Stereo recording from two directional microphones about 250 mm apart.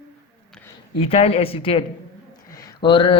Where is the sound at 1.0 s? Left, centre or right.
Left.